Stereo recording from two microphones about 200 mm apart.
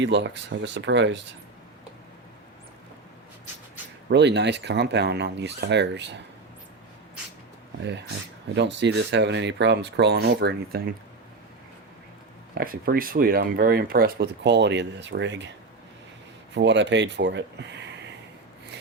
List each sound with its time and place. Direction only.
0.0 s speech: 60° right (ahead or behind)
4.1 s speech: 60° right (ahead or behind)
8.5 s speech: 60° right (ahead or behind)
12.5 s speech: 45° right (ahead or behind); by 15.4 s 60° right (ahead or behind)
16.6 s speech: 60° right (ahead or behind)